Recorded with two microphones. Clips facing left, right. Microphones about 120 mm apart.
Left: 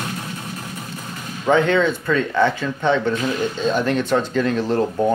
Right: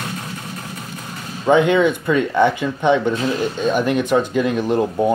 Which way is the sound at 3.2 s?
25° right (ahead or behind).